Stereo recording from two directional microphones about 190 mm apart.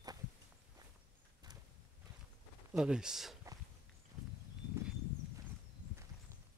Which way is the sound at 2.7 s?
5° right (ahead or behind).